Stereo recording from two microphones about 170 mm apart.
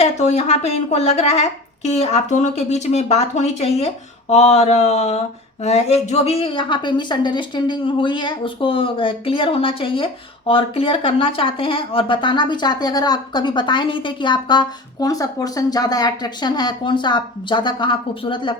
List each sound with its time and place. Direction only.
0.0 s a woman's voice: 40° left (ahead or behind)